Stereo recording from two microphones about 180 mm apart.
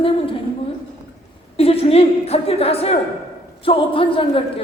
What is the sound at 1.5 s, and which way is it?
A man's voice, 35° left (ahead or behind).